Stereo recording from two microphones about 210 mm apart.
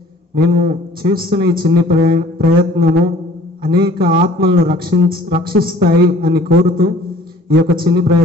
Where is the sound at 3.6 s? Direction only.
45° right (ahead or behind).